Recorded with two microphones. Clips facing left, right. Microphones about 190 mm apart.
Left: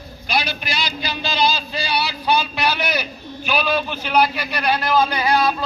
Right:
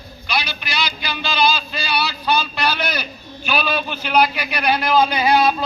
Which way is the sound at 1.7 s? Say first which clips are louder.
Even; 15° left (ahead or behind).